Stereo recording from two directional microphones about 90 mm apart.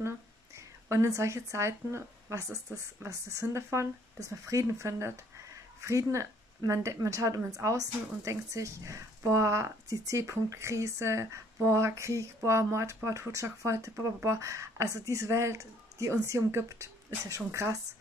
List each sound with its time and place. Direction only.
0.8 s speech: 35° right (ahead or behind)